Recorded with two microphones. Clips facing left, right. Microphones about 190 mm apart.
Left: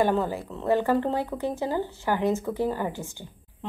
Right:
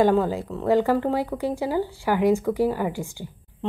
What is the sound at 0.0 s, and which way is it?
Speech, 15° right (ahead or behind).